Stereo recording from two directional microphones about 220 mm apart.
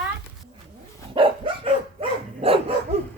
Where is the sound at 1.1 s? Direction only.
25° right (ahead or behind).